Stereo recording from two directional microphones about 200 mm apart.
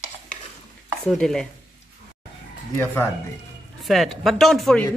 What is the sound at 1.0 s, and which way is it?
Speech, 5° left (ahead or behind).